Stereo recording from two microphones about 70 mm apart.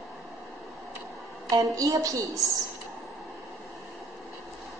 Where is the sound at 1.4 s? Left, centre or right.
Right.